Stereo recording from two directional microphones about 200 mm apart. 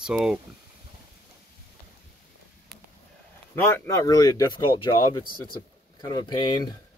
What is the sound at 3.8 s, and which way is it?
Speech, 15° left (ahead or behind).